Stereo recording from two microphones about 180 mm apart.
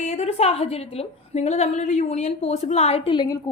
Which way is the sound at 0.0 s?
40° left (ahead or behind).